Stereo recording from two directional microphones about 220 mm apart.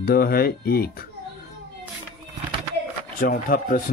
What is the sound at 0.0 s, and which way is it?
Speech, 45° left (ahead or behind).